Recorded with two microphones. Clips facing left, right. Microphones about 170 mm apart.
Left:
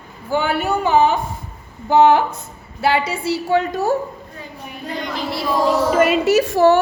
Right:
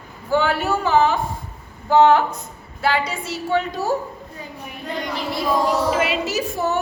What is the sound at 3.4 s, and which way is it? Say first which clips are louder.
Speech: left 2 dB; 40° left (ahead or behind).